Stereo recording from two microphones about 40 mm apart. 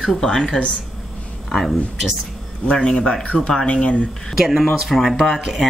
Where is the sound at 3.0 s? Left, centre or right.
Left.